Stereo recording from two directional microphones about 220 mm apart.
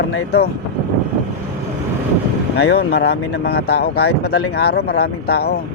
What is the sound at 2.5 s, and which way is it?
Speech, 50° left (ahead or behind).